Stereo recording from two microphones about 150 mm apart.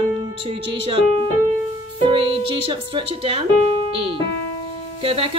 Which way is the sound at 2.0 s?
35° right (ahead or behind).